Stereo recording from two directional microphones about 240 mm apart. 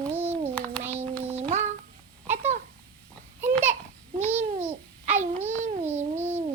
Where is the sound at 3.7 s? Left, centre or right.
Right.